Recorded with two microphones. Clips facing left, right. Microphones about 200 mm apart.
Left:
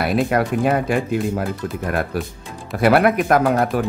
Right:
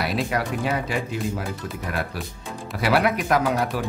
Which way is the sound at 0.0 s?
55° left (ahead or behind).